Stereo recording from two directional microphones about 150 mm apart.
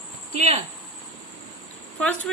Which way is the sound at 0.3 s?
45° right (ahead or behind).